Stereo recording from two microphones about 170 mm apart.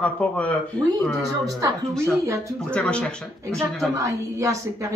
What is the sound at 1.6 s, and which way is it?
Speech, 15° right (ahead or behind).